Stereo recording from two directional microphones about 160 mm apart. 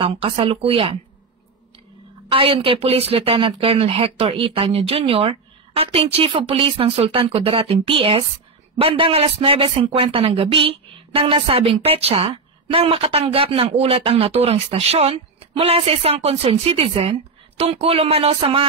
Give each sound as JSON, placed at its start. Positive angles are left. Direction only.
{"t": 0.0, "sound": "a man's voice", "side_deg": -35}
{"t": 2.3, "sound": "a man's voice", "side_deg": -35}